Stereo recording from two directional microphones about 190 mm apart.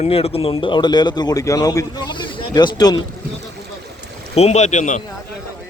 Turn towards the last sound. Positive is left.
turn(degrees=40)  # may be behind; listen again after turning